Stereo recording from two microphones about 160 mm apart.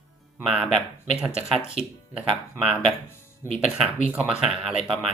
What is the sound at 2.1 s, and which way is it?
Speech, 5° right (ahead or behind).